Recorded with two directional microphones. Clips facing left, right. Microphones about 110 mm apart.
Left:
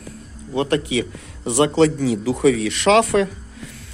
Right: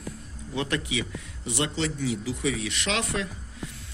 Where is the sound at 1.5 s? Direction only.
70° left (ahead or behind).